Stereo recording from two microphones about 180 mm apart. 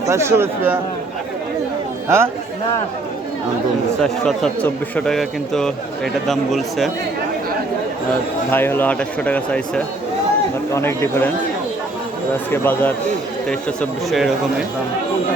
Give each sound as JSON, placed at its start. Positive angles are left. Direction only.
{"t": 0.1, "sound": "speech", "side_deg": -15}
{"t": 2.0, "sound": "speech", "side_deg": -15}
{"t": 4.0, "sound": "a man's voice", "side_deg": 5}
{"t": 8.4, "sound": "speech", "side_deg": 10}
{"t": 12.5, "sound": "speech", "side_deg": 10}